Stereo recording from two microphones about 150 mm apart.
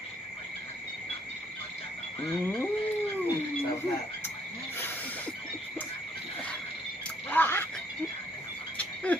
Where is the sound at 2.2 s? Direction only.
15° left (ahead or behind).